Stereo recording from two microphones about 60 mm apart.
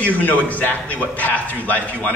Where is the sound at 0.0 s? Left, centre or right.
Left.